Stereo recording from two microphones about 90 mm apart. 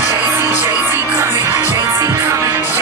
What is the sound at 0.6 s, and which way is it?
Music, 25° right (ahead or behind).